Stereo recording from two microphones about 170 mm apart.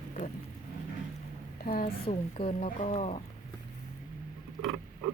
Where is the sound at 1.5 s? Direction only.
60° left (ahead or behind).